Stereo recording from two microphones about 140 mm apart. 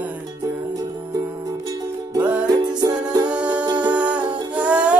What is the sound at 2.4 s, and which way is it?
Music, 25° right (ahead or behind).